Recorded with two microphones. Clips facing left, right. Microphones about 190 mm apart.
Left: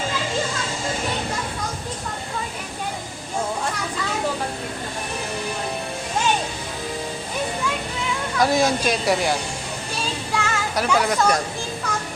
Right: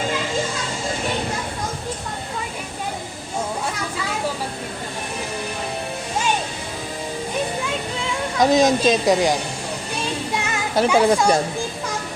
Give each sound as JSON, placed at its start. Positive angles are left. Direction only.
{"t": 8.4, "sound": "a woman's voice", "side_deg": -20}
{"t": 10.3, "sound": "children playing", "side_deg": -20}